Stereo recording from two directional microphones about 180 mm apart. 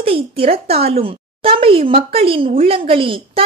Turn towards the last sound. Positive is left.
turn(degrees=-30)  # may be behind; listen again after turning